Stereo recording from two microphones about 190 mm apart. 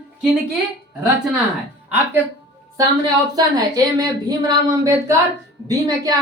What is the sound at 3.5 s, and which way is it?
A woman's voice, 20° right (ahead or behind).